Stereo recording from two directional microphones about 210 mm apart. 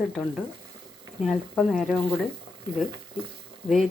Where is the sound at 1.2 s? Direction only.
Centre (ahead or behind).